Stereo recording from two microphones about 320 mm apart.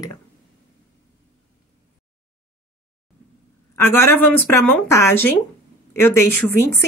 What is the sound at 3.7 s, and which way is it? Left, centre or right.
Speech, centre.